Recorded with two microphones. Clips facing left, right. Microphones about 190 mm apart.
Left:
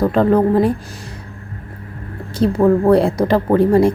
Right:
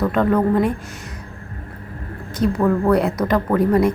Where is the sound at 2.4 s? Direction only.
30° left (ahead or behind).